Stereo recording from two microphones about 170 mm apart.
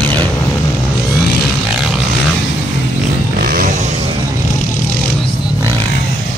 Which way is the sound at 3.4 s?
55° right (ahead or behind).